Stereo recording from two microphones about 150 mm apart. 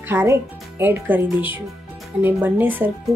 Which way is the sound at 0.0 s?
15° right (ahead or behind).